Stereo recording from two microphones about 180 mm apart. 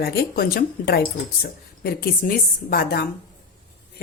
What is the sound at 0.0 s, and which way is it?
Speech, 60° left (ahead or behind).